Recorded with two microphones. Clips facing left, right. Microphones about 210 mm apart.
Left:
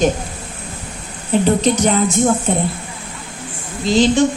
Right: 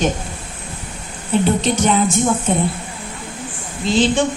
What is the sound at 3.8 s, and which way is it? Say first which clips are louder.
Speech: left 3 dB; 40° left (ahead or behind).